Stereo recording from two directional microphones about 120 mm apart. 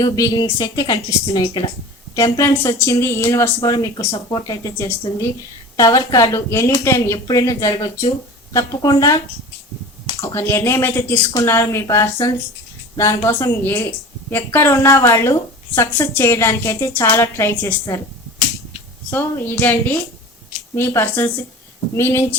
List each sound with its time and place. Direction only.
0.0 s a woman's voice: 30° left (ahead or behind)
19.1 s a woman's voice: 15° left (ahead or behind)